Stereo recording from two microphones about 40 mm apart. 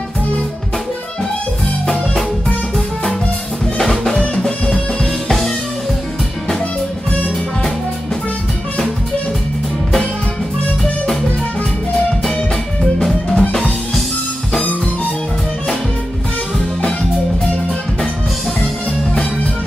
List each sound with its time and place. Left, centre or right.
3.8 s music: centre
13.4 s music: left